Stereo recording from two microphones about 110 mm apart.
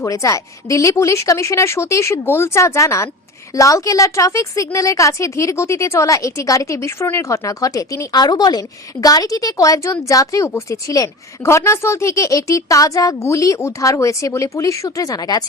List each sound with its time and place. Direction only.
0.0 s a woman's voice: 30° left (ahead or behind)